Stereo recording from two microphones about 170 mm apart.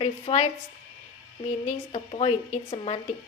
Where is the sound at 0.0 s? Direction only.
40° left (ahead or behind).